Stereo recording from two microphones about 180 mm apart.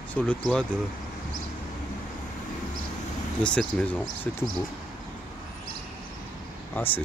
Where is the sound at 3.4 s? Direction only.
5° left (ahead or behind).